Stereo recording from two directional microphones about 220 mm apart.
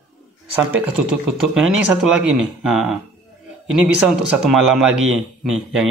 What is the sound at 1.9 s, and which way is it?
Speech, 5° right (ahead or behind).